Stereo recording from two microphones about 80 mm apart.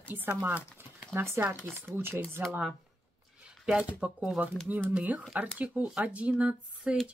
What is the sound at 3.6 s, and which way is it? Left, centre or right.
Speech, centre.